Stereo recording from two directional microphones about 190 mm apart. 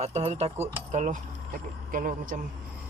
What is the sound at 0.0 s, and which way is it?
Speech, 35° right (ahead or behind).